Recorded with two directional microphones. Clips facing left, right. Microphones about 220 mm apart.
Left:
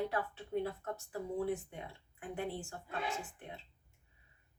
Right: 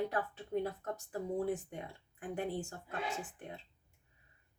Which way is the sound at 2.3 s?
45° right (ahead or behind).